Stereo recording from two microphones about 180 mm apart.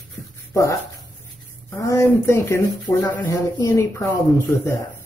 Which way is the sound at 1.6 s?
15° left (ahead or behind).